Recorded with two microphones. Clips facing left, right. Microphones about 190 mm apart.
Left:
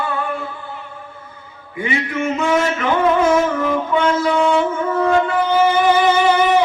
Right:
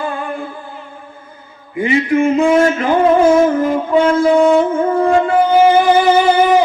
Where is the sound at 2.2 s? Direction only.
30° right (ahead or behind).